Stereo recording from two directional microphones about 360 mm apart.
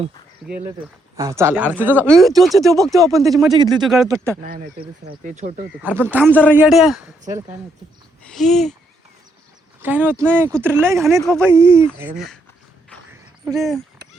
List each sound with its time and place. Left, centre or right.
1.1 s speech: centre
3.5 s speech: centre
3.8 s speech: centre
4.4 s speech: right
5.8 s speech: centre
9.8 s speech: centre
13.4 s speech: centre